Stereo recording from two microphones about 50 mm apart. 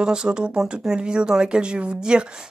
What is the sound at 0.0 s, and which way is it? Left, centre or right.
Speech, centre.